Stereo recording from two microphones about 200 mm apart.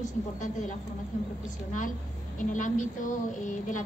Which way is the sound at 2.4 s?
40° left (ahead or behind).